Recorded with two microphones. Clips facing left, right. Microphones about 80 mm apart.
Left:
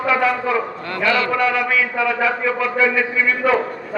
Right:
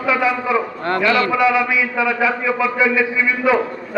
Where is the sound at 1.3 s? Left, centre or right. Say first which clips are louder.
Right 2 dB; centre.